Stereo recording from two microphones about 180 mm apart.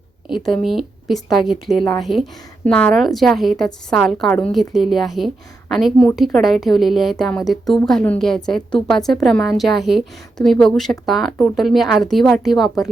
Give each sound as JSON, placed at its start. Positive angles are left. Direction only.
{"t": 0.3, "sound": "a woman's voice", "side_deg": 0}
{"t": 1.7, "sound": "a woman's voice", "side_deg": 25}
{"t": 2.0, "sound": "a woman's voice", "side_deg": 0}